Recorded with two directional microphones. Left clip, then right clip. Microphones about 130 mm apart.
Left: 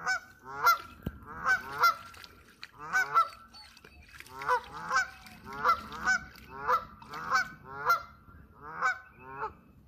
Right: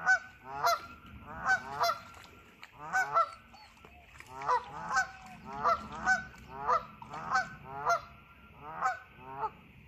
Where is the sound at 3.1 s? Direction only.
10° left (ahead or behind).